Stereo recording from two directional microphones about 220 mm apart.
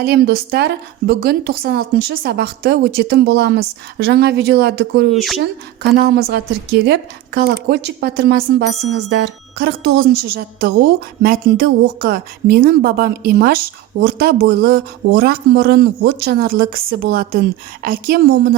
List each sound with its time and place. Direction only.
0.0 s a woman's voice: 45° right (ahead or behind)
5.1 s speech: centre (ahead or behind)
6.0 s a woman's voice: 45° right (ahead or behind)